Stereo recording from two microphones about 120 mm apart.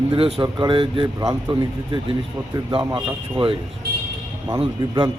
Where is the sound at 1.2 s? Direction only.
30° right (ahead or behind).